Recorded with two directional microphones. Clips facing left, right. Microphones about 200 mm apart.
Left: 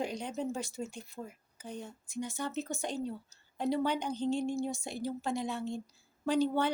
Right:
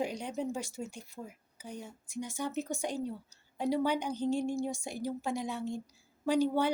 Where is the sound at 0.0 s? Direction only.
10° right (ahead or behind).